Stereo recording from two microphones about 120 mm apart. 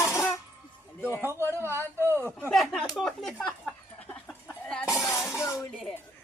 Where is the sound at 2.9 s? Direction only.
5° left (ahead or behind).